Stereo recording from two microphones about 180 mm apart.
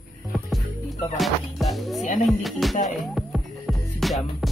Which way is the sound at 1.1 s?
Centre (ahead or behind).